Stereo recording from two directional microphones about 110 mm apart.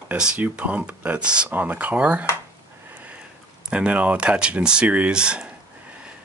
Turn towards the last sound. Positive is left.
turn(degrees=-10)  # may be behind; listen again after turning